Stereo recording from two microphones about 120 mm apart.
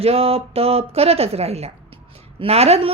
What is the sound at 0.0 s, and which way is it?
A woman's voice, 55° right (ahead or behind).